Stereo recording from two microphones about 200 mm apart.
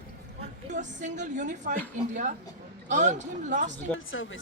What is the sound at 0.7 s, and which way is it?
A woman's voice, 40° right (ahead or behind).